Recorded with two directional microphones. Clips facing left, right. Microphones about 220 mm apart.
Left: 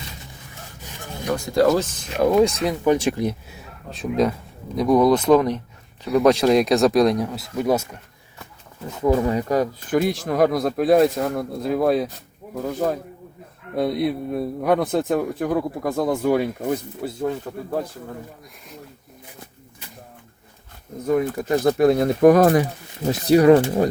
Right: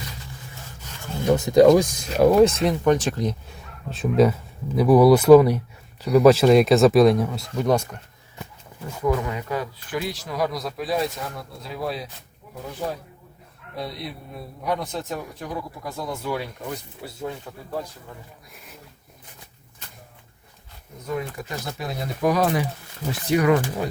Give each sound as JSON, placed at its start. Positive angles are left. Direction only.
{"t": 0.9, "sound": "rub", "side_deg": 15}
{"t": 1.3, "sound": "speech", "side_deg": -20}
{"t": 2.2, "sound": "speech", "side_deg": 0}
{"t": 3.9, "sound": "speech", "side_deg": 0}
{"t": 9.0, "sound": "speech", "side_deg": 30}
{"t": 21.1, "sound": "speech", "side_deg": 50}
{"t": 23.1, "sound": "speech", "side_deg": 35}